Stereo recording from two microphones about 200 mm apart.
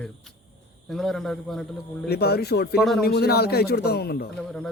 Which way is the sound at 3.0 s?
50° left (ahead or behind).